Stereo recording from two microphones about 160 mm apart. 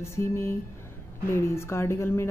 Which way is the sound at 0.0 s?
15° left (ahead or behind).